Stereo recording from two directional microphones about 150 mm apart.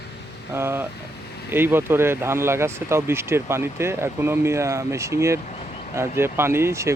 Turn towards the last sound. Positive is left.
turn(degrees=-20)  # may be behind; listen again after turning